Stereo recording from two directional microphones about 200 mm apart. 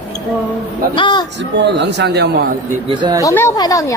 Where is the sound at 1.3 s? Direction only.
60° right (ahead or behind).